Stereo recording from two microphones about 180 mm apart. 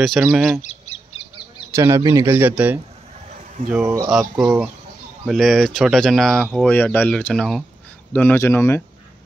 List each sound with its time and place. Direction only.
0.0 s speech: centre (ahead or behind)
0.6 s bird: 40° left (ahead or behind)
1.7 s speech: 15° right (ahead or behind)
4.1 s speech: 5° right (ahead or behind); by 8.8 s 15° left (ahead or behind)